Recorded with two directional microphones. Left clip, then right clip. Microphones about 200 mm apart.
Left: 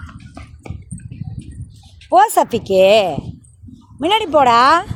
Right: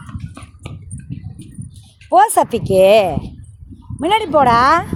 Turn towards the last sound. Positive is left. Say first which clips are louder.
# left 1 dB
turn(degrees=5)  # may be behind; listen again after turning